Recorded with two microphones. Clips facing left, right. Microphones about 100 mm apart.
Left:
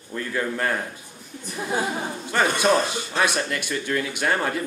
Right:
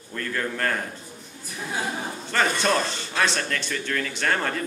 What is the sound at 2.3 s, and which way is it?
Speech, 10° left (ahead or behind).